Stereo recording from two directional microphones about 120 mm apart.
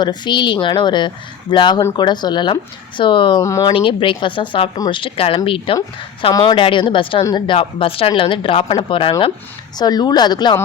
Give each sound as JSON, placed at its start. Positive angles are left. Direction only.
{"t": 0.0, "sound": "a woman's voice", "side_deg": 40}
{"t": 3.4, "sound": "speech", "side_deg": 25}
{"t": 3.7, "sound": "a woman's voice", "side_deg": 45}
{"t": 9.7, "sound": "speech", "side_deg": 35}